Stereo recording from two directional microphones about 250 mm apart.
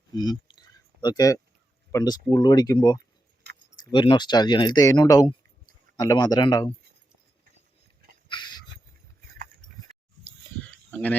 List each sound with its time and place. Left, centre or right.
0.1 s a sound: centre
1.0 s speech: centre
3.4 s keys jangling: right
3.9 s speech: centre
8.3 s a sound: centre
10.9 s speech: centre